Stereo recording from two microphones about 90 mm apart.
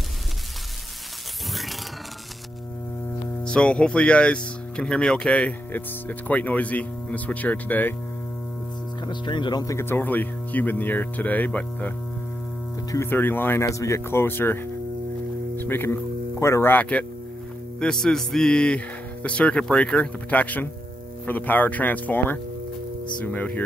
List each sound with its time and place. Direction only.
3.4 s speech: 10° left (ahead or behind)
9.0 s speech: 55° left (ahead or behind)
9.7 s speech: 30° left (ahead or behind)
13.1 s speech: 20° left (ahead or behind)
13.7 s speech: 35° left (ahead or behind)
17.7 s speech: 10° left (ahead or behind)